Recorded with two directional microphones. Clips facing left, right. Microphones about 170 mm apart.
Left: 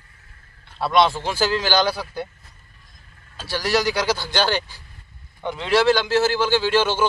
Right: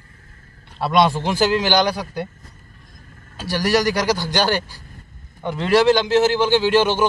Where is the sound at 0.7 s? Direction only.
10° right (ahead or behind).